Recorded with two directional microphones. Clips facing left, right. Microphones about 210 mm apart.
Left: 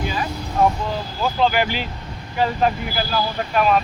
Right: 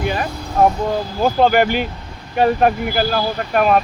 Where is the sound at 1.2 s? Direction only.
50° right (ahead or behind).